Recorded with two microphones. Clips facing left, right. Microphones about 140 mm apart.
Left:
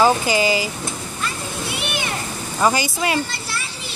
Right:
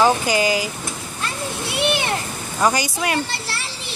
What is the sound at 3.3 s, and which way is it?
Children playing, 70° right (ahead or behind).